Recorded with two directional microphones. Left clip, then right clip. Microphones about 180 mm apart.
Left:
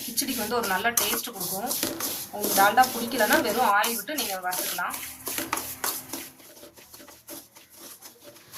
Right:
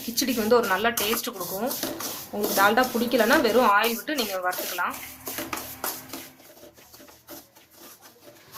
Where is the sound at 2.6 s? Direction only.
40° right (ahead or behind).